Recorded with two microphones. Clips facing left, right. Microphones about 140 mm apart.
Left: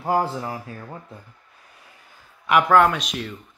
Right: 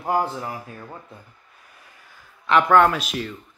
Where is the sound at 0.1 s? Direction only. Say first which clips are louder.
Left 1 dB; 30° left (ahead or behind).